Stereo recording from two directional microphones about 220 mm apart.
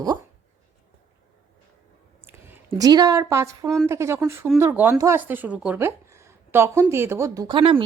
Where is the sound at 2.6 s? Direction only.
20° right (ahead or behind).